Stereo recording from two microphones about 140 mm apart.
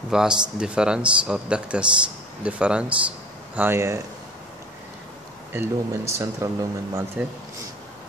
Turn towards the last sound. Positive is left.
turn(degrees=-20)  # may be behind; listen again after turning